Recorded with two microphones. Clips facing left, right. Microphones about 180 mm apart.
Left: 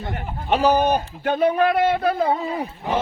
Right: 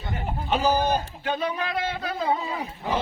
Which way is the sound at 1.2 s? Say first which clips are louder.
Left 9 dB; 55° left (ahead or behind).